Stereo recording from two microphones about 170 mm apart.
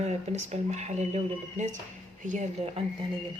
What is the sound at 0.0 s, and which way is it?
Speech, 40° right (ahead or behind).